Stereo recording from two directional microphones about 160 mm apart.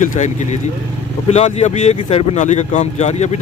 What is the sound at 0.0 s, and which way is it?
Speech, 50° left (ahead or behind).